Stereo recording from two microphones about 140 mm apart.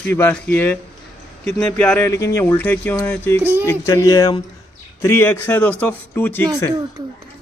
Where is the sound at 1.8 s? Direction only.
10° left (ahead or behind).